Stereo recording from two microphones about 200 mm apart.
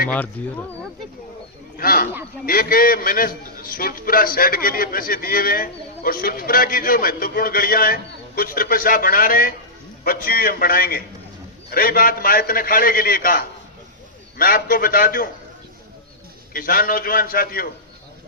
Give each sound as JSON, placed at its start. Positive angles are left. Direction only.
{"t": 0.4, "sound": "speech", "side_deg": 10}
{"t": 1.7, "sound": "a sound", "side_deg": 45}
{"t": 2.5, "sound": "a man's voice", "side_deg": 45}
{"t": 16.5, "sound": "a man's voice", "side_deg": 45}